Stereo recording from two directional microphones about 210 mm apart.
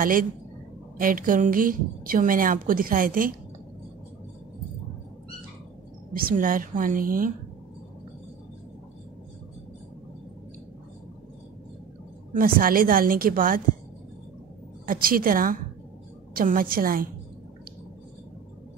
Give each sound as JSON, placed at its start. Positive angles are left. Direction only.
{"t": 0.0, "sound": "a woman's voice", "side_deg": -40}
{"t": 6.1, "sound": "a woman's voice", "side_deg": -40}
{"t": 12.4, "sound": "a woman's voice", "side_deg": -40}
{"t": 14.9, "sound": "a woman's voice", "side_deg": -45}